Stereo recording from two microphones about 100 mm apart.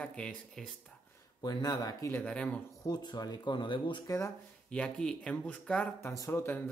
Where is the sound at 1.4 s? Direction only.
45° left (ahead or behind).